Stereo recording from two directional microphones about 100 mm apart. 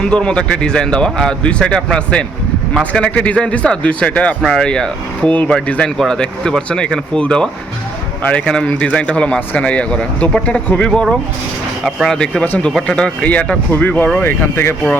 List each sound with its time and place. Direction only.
0.0 s speech: 10° left (ahead or behind)